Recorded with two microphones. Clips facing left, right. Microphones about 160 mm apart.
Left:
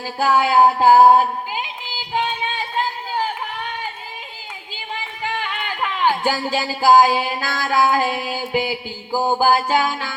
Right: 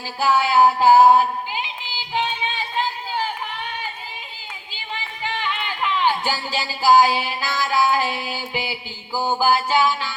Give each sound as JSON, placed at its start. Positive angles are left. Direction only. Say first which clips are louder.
{"t": 0.0, "sound": "speech", "louder": "left 2 dB", "side_deg": 45}
{"t": 2.1, "sound": "a sound", "louder": "left 2 dB", "side_deg": 45}
{"t": 5.2, "sound": "speech", "louder": "even", "side_deg": 45}